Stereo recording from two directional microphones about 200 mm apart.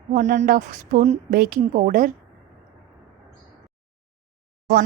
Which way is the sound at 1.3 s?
45° right (ahead or behind).